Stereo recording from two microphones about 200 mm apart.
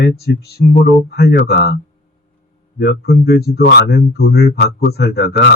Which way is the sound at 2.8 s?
55° left (ahead or behind).